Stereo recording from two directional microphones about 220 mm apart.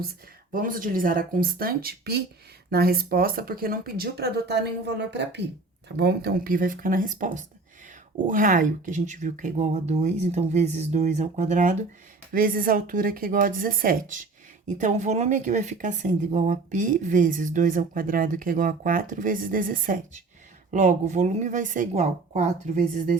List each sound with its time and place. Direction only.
0.5 s speech: 40° right (ahead or behind)